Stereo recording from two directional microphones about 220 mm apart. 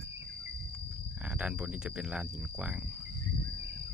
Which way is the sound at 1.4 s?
5° right (ahead or behind).